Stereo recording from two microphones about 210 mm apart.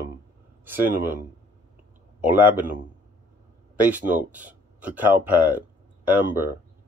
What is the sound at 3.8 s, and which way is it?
Speech, 5° right (ahead or behind).